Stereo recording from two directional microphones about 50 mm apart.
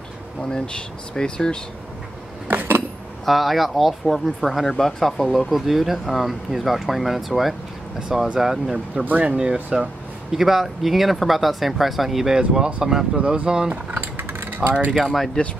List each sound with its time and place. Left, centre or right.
0.5 s speech: centre
2.4 s a sound: right
3.3 s speech: centre
5.5 s speech: centre
10.3 s speech: centre
12.4 s speech: centre
14.1 s a sound: right
14.9 s speech: centre
15.4 s speech: centre